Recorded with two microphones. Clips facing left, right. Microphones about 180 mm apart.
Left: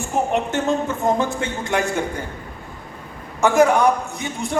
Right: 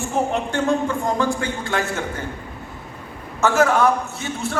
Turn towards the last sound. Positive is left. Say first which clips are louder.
# left 1 dB
turn(degrees=15)  # may be behind; listen again after turning